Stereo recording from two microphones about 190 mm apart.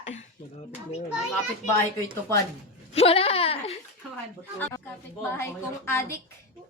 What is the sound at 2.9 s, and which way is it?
Speech, 30° left (ahead or behind).